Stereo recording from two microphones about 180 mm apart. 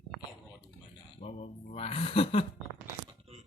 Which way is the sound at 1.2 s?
35° left (ahead or behind).